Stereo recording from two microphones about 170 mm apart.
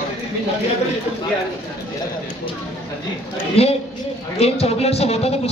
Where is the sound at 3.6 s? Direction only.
35° left (ahead or behind).